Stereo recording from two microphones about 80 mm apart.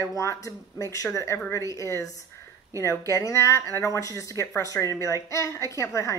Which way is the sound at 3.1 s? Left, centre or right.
Left.